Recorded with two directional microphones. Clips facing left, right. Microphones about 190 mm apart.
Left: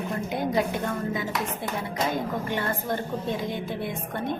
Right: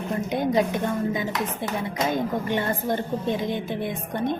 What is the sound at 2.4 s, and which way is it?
A woman's voice, 20° right (ahead or behind).